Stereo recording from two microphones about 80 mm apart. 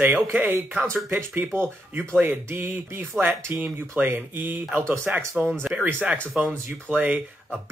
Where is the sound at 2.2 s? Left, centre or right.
Right.